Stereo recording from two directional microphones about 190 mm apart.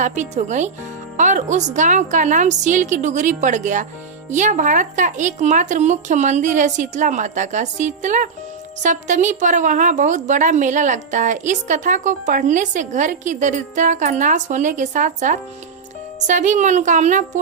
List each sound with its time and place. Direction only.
0.0 s a woman's voice: 40° right (ahead or behind)